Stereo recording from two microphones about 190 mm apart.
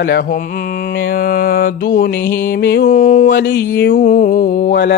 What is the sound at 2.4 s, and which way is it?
Music, 60° left (ahead or behind).